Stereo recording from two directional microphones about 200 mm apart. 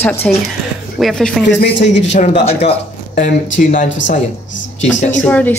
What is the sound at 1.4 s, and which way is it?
Speech, 65° left (ahead or behind).